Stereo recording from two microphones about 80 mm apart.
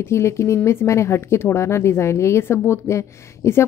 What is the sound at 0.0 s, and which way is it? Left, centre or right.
A woman's voice, left.